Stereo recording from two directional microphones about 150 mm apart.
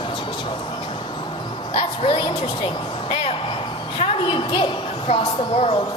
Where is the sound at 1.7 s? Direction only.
40° left (ahead or behind).